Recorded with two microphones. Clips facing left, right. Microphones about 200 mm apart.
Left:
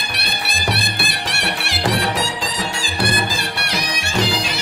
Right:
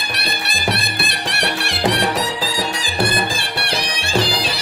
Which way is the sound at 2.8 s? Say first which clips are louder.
Even; 25° right (ahead or behind).